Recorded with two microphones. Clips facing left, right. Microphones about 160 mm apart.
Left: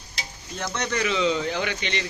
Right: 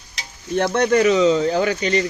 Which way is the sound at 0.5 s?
60° right (ahead or behind).